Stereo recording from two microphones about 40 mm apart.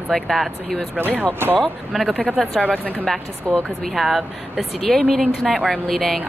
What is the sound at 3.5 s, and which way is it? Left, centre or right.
Speech, centre.